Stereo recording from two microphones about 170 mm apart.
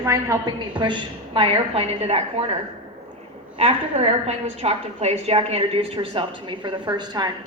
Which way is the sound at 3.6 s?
35° right (ahead or behind).